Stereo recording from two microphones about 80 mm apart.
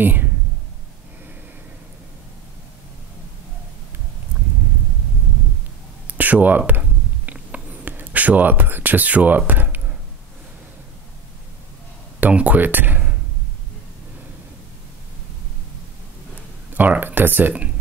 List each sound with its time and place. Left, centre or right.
0.0 s speech: right
6.0 s a sound: centre
12.2 s speech: centre
16.7 s speech: right